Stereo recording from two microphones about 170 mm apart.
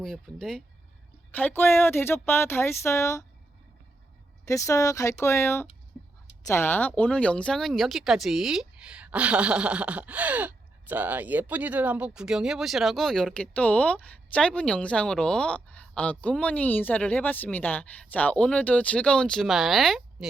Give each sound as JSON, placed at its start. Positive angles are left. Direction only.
{"t": 0.0, "sound": "speech", "side_deg": 5}
{"t": 4.4, "sound": "speech", "side_deg": 20}